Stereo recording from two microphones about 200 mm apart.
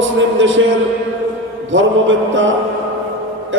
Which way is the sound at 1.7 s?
75° right (ahead or behind).